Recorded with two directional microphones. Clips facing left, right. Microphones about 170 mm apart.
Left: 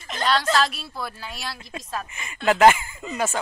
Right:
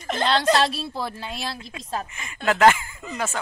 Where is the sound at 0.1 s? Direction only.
25° right (ahead or behind).